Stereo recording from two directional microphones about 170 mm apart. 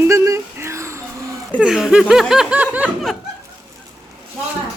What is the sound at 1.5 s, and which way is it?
Speech, 5° right (ahead or behind).